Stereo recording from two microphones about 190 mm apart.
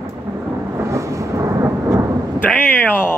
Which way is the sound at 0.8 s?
15° right (ahead or behind).